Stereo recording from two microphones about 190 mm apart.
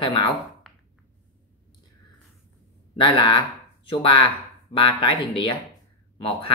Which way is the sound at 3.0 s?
25° left (ahead or behind).